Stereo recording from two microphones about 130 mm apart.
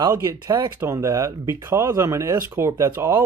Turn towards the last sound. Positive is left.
turn(degrees=-20)  # may be behind; listen again after turning